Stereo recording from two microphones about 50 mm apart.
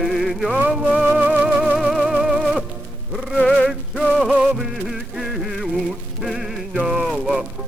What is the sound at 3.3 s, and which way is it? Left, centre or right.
Music, centre.